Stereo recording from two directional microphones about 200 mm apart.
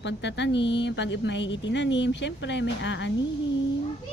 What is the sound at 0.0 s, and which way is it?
Speech, 60° left (ahead or behind).